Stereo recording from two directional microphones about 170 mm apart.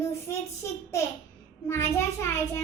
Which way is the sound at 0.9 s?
15° left (ahead or behind).